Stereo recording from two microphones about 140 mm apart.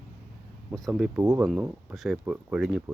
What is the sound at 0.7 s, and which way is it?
Speech, centre (ahead or behind).